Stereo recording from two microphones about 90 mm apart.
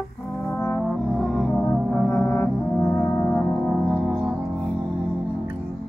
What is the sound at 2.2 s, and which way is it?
Brass instrument, 25° left (ahead or behind).